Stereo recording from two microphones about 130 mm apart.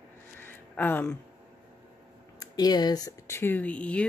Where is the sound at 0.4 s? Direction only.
15° left (ahead or behind).